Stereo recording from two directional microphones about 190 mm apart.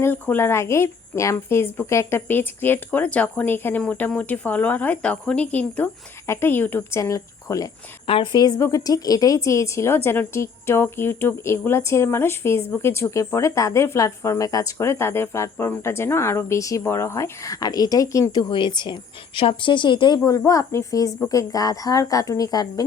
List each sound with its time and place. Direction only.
0.0 s a woman's voice: 10° left (ahead or behind)
8.0 s a woman's voice: 30° left (ahead or behind)